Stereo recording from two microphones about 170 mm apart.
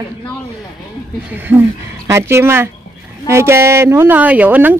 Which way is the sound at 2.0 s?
15° right (ahead or behind).